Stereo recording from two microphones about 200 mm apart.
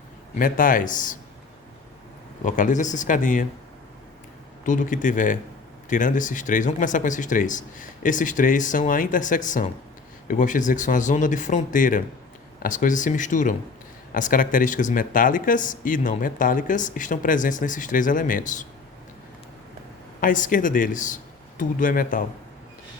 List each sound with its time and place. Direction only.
0.3 s speech: 45° left (ahead or behind)
2.4 s speech: 40° left (ahead or behind)
4.6 s speech: 40° left (ahead or behind)
20.2 s speech: 40° left (ahead or behind)